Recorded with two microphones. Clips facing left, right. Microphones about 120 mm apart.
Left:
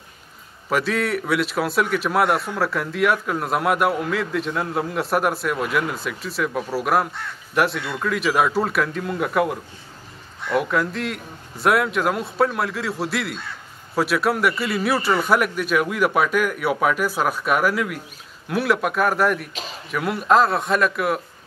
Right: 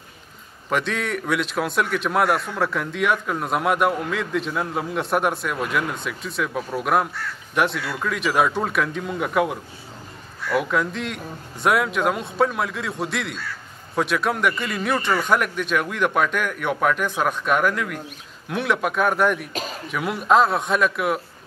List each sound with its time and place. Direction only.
0.7 s a man's voice: 5° left (ahead or behind)